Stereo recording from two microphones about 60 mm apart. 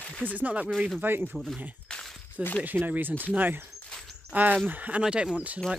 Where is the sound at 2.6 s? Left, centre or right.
Right.